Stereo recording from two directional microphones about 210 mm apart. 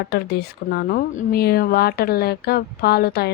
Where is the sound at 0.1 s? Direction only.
50° left (ahead or behind).